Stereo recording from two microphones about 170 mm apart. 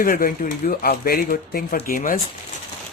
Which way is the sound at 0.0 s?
55° left (ahead or behind).